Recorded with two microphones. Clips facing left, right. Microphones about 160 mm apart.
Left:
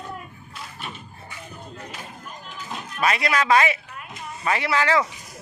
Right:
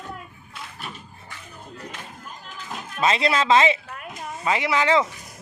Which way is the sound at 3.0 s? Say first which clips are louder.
Right 1 dB; 25° right (ahead or behind).